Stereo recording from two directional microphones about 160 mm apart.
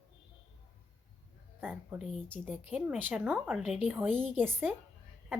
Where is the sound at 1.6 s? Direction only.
10° right (ahead or behind).